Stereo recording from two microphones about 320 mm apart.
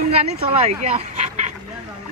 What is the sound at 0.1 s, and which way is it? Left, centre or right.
Speech, centre.